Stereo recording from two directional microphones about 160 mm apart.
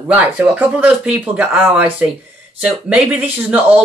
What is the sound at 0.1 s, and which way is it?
Speech, 10° right (ahead or behind).